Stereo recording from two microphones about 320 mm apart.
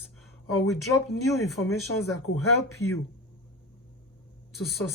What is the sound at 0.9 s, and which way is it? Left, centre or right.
Speech, left.